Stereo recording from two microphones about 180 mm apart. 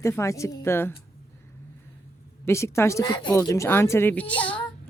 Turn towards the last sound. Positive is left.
turn(degrees=5)  # may be behind; listen again after turning